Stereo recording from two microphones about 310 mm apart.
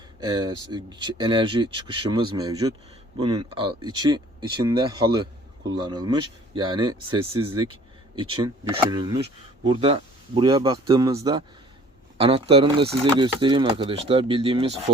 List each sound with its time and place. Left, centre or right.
0.2 s speech: centre